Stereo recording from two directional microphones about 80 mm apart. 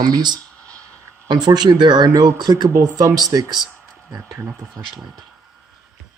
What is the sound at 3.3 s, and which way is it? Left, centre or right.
Speech, right.